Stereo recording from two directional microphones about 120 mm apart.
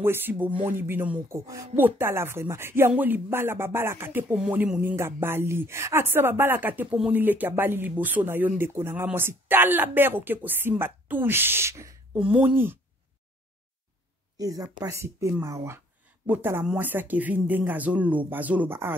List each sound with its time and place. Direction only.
0.0 s speech: 20° right (ahead or behind)
1.3 s speech: 25° right (ahead or behind)
1.8 s speech: 15° right (ahead or behind)
12.2 s speech: 10° right (ahead or behind)
14.4 s speech: 30° right (ahead or behind)